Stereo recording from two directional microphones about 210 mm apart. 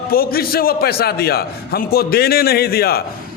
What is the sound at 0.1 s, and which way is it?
A man's voice, 45° left (ahead or behind).